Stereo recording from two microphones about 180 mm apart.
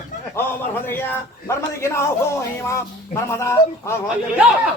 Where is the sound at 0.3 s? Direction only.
10° left (ahead or behind).